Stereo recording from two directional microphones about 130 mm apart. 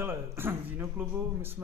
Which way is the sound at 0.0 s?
20° right (ahead or behind).